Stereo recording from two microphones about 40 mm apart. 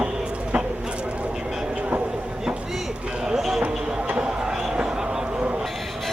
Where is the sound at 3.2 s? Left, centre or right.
Centre.